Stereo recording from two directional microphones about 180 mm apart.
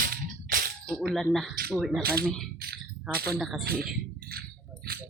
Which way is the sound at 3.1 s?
60° right (ahead or behind).